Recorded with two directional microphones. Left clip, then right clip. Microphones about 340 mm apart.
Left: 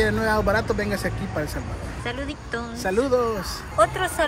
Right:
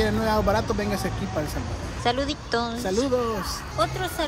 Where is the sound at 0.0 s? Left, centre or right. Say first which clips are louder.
Left 2 dB; centre.